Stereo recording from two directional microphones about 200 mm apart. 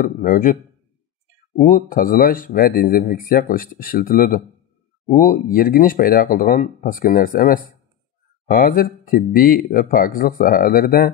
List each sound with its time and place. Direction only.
0.0 s speech: 40° left (ahead or behind)
1.6 s speech: 40° left (ahead or behind)